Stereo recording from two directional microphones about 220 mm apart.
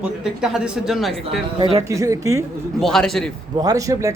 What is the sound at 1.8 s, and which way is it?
Speech, 15° right (ahead or behind).